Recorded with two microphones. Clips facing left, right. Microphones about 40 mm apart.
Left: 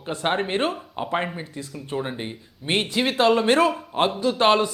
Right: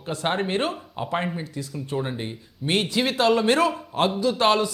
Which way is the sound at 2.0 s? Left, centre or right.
Centre.